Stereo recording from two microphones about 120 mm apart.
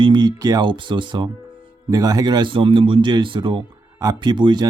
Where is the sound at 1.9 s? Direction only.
30° right (ahead or behind).